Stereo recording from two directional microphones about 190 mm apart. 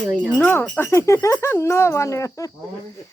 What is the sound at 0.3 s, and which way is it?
A woman's voice, 10° left (ahead or behind).